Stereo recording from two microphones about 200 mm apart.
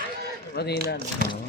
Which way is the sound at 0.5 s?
55° left (ahead or behind).